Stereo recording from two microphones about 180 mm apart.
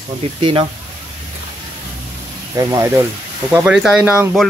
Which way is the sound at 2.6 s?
15° right (ahead or behind).